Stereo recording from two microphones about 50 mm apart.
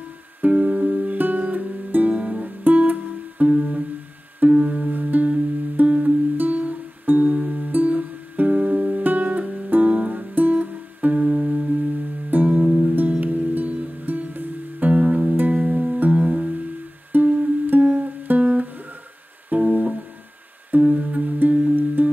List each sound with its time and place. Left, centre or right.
0.4 s music: right
14.9 s music: right